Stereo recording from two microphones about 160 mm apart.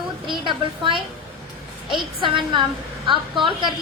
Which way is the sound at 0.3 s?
30° right (ahead or behind).